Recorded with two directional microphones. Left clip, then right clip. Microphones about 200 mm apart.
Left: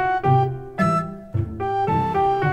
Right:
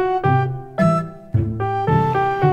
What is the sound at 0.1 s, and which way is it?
Music, centre (ahead or behind).